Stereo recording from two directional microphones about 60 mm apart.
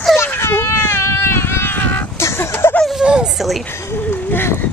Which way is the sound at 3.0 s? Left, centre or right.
Centre.